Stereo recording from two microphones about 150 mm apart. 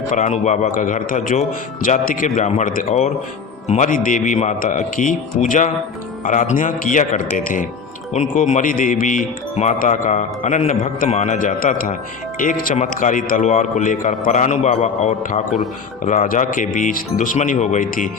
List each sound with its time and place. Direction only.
0.1 s speech: 55° left (ahead or behind)
8.1 s speech: 50° left (ahead or behind)